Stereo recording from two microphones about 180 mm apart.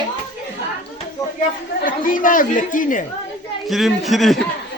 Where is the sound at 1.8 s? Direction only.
50° left (ahead or behind).